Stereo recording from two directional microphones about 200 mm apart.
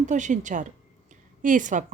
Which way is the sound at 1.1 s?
40° right (ahead or behind).